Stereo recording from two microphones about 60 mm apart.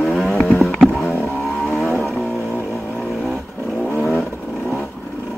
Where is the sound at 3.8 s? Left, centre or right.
Left.